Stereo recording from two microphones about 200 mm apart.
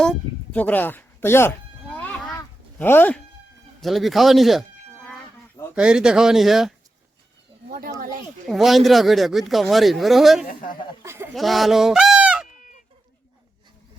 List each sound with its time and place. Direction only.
0.0 s music: 5° left (ahead or behind)
2.7 s speech: 10° left (ahead or behind)
3.8 s speech: centre (ahead or behind)
5.7 s speech: 5° right (ahead or behind)
7.7 s speech: 50° right (ahead or behind)
8.4 s speech: centre (ahead or behind)
10.5 s speech: 45° left (ahead or behind)
11.0 s a sound: 15° right (ahead or behind)
11.3 s speech: centre (ahead or behind)